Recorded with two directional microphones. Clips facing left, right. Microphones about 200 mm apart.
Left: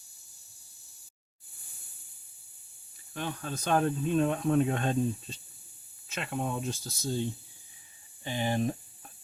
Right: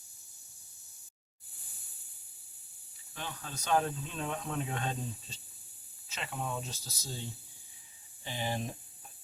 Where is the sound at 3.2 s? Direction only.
55° left (ahead or behind).